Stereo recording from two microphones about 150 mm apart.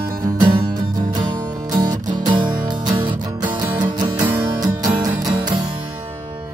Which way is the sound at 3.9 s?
25° right (ahead or behind).